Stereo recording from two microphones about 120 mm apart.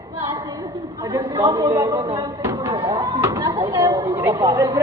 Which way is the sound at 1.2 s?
50° right (ahead or behind).